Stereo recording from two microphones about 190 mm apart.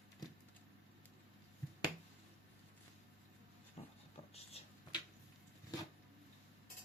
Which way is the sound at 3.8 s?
30° left (ahead or behind).